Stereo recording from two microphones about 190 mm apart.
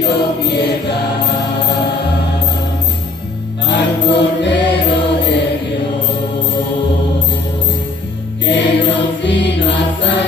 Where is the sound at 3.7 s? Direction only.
65° left (ahead or behind).